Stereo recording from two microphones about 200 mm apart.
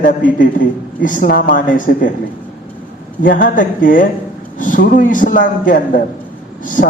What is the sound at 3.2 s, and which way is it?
A man's voice, 40° left (ahead or behind).